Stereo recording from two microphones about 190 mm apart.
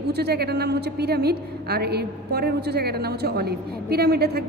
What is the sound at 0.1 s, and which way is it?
A woman's voice, 60° right (ahead or behind).